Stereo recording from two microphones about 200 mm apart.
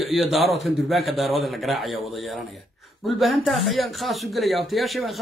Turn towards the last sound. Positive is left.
turn(degrees=0)  # may be behind; listen again after turning